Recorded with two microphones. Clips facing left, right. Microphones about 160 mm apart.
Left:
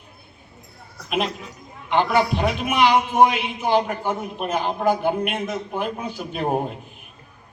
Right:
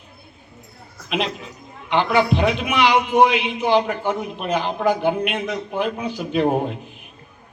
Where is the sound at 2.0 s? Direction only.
45° left (ahead or behind).